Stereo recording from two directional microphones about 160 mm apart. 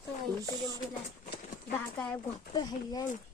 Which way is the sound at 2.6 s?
25° left (ahead or behind).